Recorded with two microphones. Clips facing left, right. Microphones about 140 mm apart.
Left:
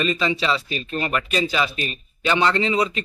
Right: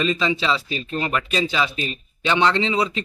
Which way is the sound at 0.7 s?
25° right (ahead or behind).